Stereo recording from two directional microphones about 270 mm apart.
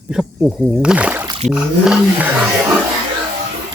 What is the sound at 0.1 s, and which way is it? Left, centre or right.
Speech, centre.